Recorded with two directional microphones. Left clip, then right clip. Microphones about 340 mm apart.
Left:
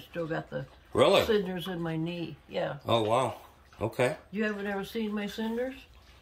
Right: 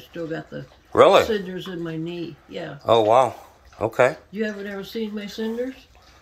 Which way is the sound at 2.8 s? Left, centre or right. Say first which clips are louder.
Right 12 dB; centre.